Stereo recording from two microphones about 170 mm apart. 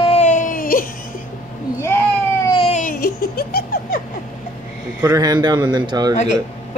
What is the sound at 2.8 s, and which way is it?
Giggle, 55° left (ahead or behind).